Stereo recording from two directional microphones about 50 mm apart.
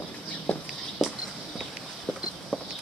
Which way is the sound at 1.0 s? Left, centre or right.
Centre.